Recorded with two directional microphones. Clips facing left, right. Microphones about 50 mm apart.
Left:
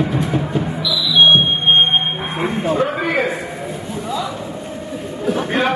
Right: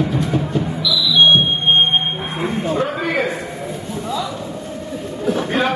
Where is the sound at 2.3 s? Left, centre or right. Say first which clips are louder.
Left 2 dB; centre.